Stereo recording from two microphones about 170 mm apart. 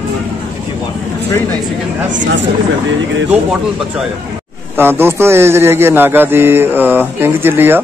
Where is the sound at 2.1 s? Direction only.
90° right.